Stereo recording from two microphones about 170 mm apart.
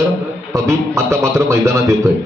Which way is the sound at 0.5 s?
15° right (ahead or behind).